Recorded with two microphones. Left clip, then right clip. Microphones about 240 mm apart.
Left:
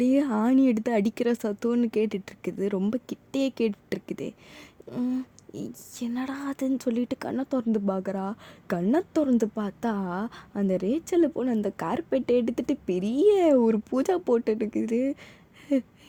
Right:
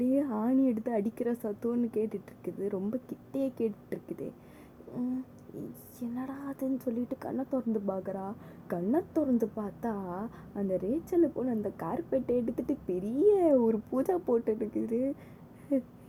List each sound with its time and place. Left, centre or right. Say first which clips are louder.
0.0 s speech: left 6 dB; left